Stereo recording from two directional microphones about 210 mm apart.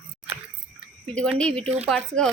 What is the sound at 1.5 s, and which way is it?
Speech, 30° right (ahead or behind).